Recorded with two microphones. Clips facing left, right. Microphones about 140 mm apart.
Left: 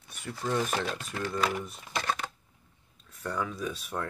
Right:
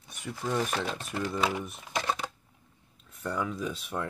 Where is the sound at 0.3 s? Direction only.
10° right (ahead or behind).